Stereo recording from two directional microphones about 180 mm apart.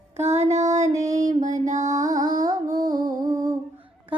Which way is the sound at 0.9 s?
20° right (ahead or behind).